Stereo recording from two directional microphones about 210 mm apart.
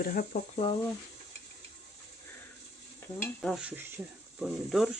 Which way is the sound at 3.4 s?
5° right (ahead or behind).